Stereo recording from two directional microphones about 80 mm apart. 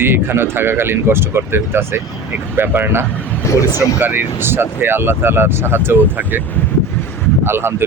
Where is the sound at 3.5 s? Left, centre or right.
Left.